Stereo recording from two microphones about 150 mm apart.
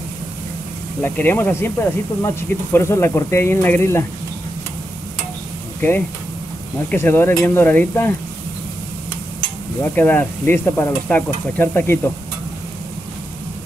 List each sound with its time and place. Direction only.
1.0 s speech: 15° left (ahead or behind)
5.8 s speech: 10° left (ahead or behind)
9.8 s speech: 15° left (ahead or behind)